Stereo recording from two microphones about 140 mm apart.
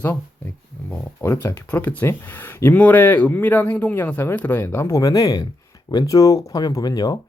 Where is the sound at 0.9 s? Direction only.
15° left (ahead or behind).